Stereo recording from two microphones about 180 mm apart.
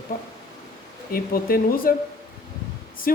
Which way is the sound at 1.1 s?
55° left (ahead or behind).